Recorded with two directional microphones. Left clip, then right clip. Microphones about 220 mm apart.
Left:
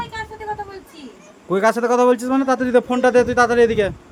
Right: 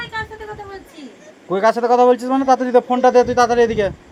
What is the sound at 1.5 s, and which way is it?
Speech, 25° left (ahead or behind).